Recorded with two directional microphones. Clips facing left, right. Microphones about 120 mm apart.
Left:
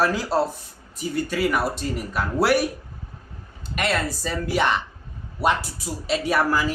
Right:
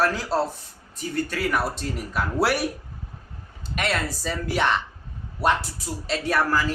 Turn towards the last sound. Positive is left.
turn(degrees=5)  # may be behind; listen again after turning